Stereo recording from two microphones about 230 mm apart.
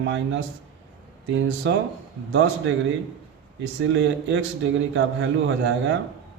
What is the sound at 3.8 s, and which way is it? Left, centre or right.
A man's voice, right.